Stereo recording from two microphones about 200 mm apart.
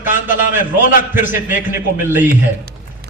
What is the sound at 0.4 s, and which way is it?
Speech, 40° left (ahead or behind).